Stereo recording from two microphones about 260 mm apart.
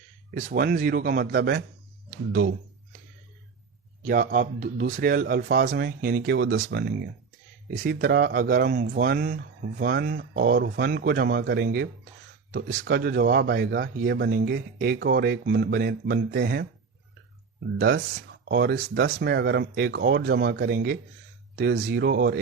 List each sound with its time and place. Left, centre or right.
0.3 s speech: right
4.0 s speech: right
17.7 s speech: right